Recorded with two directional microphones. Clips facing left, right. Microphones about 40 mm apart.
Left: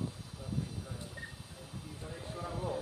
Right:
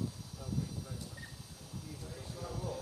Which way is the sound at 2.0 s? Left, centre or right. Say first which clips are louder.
Left 6 dB; left.